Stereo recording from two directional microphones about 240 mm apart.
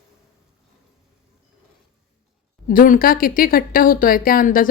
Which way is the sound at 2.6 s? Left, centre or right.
Left.